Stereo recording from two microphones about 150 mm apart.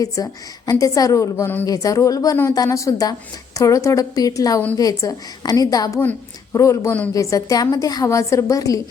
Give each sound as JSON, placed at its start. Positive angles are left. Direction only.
{"t": 0.0, "sound": "a woman's voice", "side_deg": 25}